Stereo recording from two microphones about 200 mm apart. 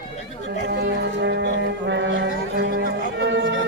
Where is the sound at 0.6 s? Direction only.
55° right (ahead or behind).